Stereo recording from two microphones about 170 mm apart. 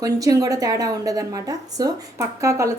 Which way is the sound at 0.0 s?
20° right (ahead or behind).